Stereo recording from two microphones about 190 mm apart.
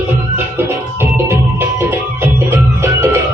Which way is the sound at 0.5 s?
10° right (ahead or behind).